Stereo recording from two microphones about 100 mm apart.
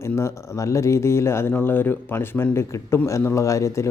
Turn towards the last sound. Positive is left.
turn(degrees=30)  # may be behind; listen again after turning